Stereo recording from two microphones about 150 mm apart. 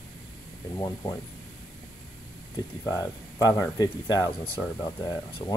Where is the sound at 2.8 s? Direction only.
20° left (ahead or behind).